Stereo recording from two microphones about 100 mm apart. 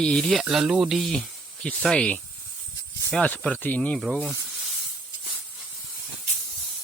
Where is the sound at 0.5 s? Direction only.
5° right (ahead or behind); by 4.0 s 15° left (ahead or behind).